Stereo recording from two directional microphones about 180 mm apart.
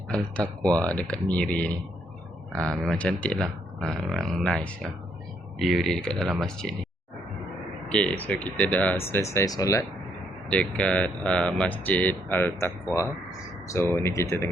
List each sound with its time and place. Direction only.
0.1 s speech: 5° left (ahead or behind)
7.9 s speech: 5° left (ahead or behind)
10.5 s speech: 5° left (ahead or behind)